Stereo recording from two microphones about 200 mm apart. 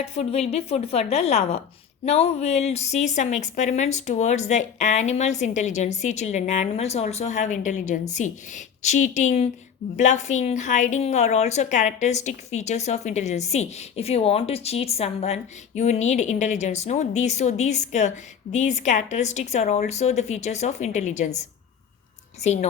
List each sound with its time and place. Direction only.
0.0 s a woman's voice: 30° left (ahead or behind)
22.4 s a woman's voice: 35° left (ahead or behind)